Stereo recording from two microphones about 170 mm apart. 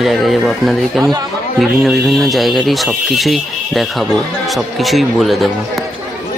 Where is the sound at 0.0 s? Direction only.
Centre (ahead or behind).